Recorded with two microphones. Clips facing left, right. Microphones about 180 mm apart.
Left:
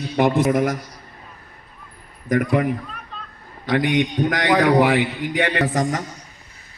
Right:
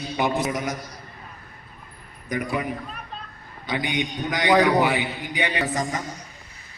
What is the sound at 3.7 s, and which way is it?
A man's voice, 90° left.